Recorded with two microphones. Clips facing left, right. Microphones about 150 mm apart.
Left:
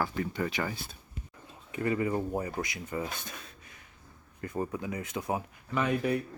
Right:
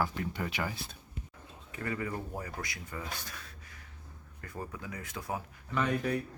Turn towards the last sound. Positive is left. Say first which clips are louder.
# left 3 dB
turn(degrees=5)  # may be behind; listen again after turning